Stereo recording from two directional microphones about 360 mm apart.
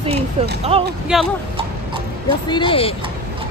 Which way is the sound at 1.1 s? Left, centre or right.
Centre.